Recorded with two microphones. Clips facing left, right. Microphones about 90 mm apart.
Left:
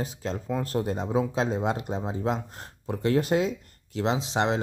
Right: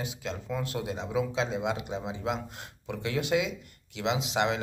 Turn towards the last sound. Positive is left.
turn(degrees=35)  # may be behind; listen again after turning